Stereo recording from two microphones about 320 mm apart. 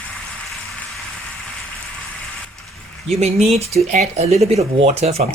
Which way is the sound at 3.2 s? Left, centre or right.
Centre.